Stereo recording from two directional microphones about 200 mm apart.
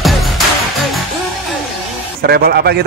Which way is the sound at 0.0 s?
Centre (ahead or behind).